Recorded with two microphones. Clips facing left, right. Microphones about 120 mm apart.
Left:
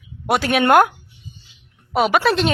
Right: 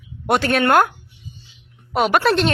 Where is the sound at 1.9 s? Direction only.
Centre (ahead or behind).